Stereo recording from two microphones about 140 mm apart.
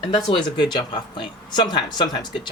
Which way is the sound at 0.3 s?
35° left (ahead or behind).